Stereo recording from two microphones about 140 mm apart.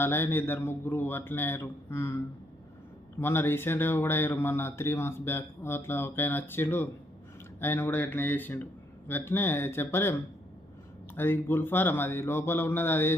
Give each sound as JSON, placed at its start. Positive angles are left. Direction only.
{"t": 0.0, "sound": "speech", "side_deg": 15}